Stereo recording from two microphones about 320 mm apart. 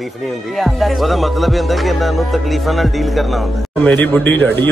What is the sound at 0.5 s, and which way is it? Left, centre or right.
Music, centre.